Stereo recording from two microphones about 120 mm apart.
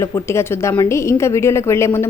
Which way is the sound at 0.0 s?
20° left (ahead or behind).